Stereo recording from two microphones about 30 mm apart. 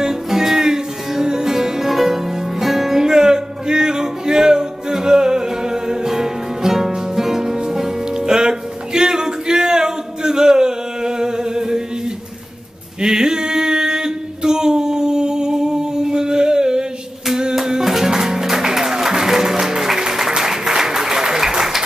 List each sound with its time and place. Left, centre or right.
0.0 s music: centre
3.0 s music: right
13.0 s a sound: right
17.6 s music: centre